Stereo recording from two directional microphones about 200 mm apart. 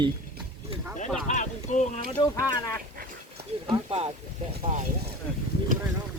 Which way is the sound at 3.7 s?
30° right (ahead or behind).